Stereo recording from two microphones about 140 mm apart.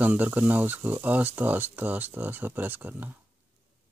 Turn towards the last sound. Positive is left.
turn(degrees=-15)  # may be behind; listen again after turning